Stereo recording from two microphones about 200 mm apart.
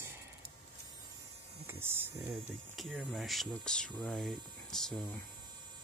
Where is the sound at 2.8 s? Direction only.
Centre (ahead or behind).